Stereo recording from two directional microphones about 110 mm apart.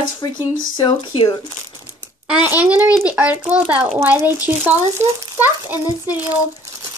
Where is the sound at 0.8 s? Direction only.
45° left (ahead or behind).